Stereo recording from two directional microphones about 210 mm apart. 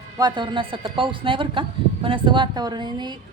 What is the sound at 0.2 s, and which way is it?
A woman's voice, 20° right (ahead or behind).